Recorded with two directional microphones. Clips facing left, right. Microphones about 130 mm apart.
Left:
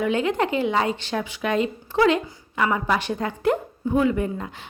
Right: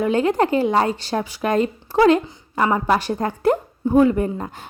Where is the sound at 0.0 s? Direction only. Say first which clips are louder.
Right 4 dB; 40° right (ahead or behind).